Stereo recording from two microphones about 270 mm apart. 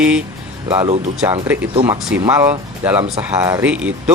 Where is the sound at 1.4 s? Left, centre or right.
Centre.